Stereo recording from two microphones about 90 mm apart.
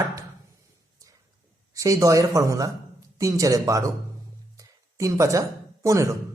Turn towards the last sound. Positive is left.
turn(degrees=-35)  # may be behind; listen again after turning